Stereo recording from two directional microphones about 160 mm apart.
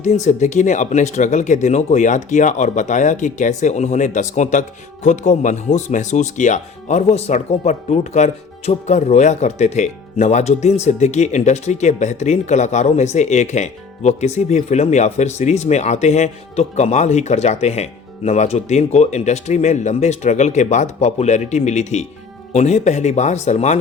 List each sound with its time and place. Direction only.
0.0 s speech: 45° left (ahead or behind)